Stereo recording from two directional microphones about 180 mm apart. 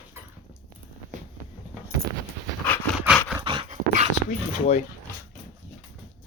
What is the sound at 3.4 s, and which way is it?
Dog, 30° right (ahead or behind).